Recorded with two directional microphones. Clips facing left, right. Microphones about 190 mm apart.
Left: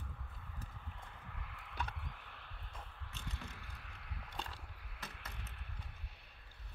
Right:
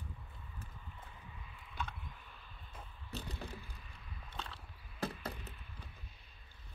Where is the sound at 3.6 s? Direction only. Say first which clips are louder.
Even; 70° left (ahead or behind).